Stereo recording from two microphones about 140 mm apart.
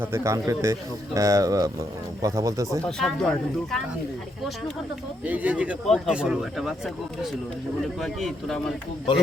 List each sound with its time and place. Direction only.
0.0 s speech: 20° right (ahead or behind)
2.8 s speech: 5° left (ahead or behind)
5.2 s speech: 10° right (ahead or behind)